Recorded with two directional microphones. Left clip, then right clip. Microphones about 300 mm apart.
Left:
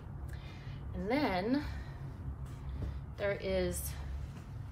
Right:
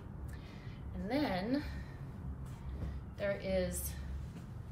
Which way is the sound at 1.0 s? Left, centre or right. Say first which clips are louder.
Left 3 dB; centre.